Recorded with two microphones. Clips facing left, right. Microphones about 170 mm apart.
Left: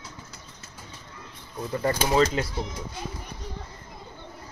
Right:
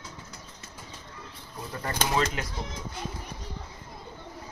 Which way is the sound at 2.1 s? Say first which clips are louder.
Left 6 dB; 35° left (ahead or behind).